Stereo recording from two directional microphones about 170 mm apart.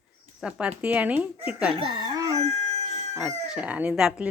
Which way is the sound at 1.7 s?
30° right (ahead or behind).